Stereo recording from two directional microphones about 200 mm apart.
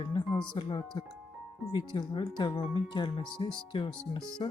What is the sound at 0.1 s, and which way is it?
Speech, 20° left (ahead or behind).